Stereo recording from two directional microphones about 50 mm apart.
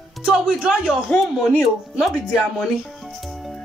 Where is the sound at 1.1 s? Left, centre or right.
Left.